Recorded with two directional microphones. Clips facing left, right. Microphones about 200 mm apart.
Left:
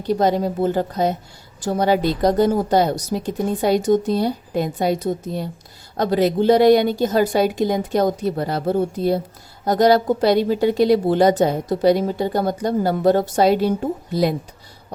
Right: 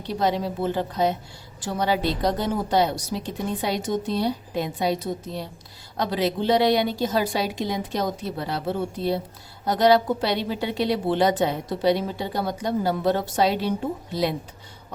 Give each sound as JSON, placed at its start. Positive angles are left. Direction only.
{"t": 0.1, "sound": "a woman's voice", "side_deg": 45}